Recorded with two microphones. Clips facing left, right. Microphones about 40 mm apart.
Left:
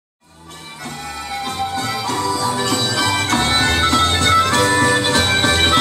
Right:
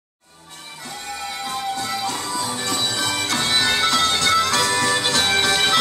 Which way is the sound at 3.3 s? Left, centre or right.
Centre.